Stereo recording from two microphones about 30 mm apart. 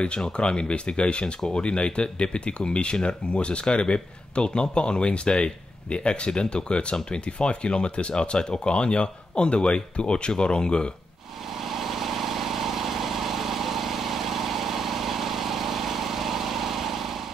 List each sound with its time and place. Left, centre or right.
0.2 s speech: left
11.6 s vehicle: centre